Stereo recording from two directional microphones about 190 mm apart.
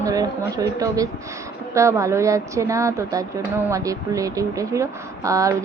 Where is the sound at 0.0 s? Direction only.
20° right (ahead or behind).